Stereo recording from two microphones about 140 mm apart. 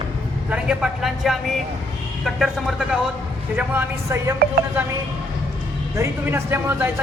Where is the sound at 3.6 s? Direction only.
15° right (ahead or behind).